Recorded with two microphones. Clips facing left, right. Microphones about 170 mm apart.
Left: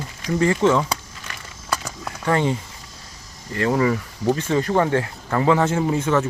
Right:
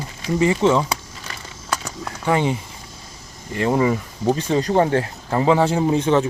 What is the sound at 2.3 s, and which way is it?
Speech, 15° right (ahead or behind).